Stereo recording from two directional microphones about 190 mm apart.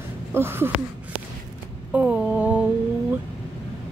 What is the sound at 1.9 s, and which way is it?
Mantra, 10° right (ahead or behind).